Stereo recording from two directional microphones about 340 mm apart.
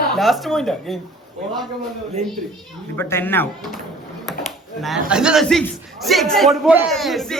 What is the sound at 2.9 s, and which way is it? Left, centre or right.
Speech, centre.